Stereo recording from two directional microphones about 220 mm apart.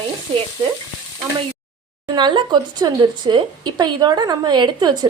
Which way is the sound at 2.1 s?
20° right (ahead or behind).